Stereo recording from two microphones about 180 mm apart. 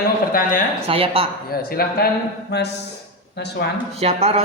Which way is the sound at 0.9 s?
30° right (ahead or behind).